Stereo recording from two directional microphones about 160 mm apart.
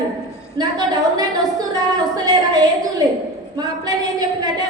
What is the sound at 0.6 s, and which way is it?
A woman's voice, 25° right (ahead or behind).